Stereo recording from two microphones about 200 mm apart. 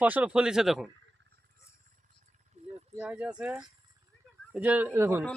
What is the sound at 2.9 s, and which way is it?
Speech, 10° right (ahead or behind).